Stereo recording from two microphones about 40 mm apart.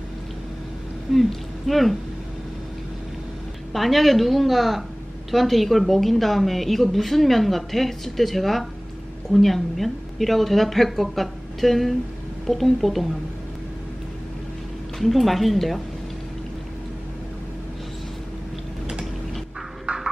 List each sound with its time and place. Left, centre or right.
1.1 s a woman's voice: centre
3.7 s a woman's voice: centre
15.0 s a woman's voice: centre
19.9 s a sound: right